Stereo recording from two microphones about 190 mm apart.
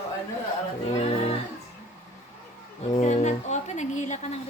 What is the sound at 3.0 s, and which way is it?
A woman's voice, 40° left (ahead or behind).